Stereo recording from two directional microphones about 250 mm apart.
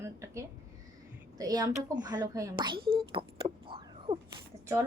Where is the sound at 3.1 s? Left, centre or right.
Right.